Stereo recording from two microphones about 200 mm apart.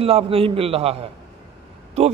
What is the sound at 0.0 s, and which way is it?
Speech, 30° right (ahead or behind).